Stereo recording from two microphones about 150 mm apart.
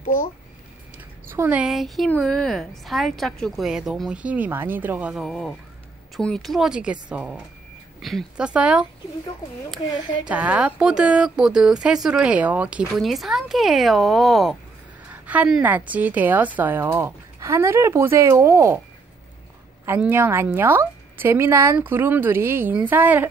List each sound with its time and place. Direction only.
0.0 s speech: 65° left (ahead or behind)
1.3 s a woman's voice: 15° right (ahead or behind)
1.6 s a woman's voice: centre (ahead or behind)
10.2 s speech: 10° right (ahead or behind)
15.0 s a woman's voice: 10° right (ahead or behind)
19.9 s a woman's voice: 15° right (ahead or behind)